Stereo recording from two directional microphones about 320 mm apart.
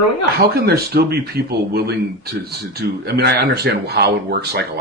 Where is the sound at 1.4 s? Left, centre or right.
Right.